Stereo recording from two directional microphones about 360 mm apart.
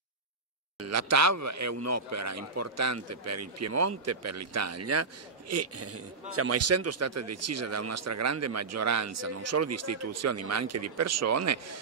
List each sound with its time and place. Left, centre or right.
0.7 s speech: right